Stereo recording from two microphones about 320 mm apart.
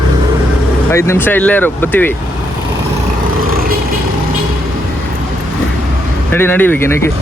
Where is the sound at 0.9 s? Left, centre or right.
Centre.